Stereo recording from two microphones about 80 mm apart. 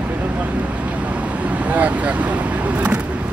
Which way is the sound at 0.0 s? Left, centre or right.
Centre.